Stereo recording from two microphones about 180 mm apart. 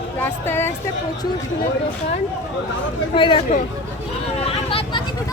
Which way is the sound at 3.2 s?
30° left (ahead or behind).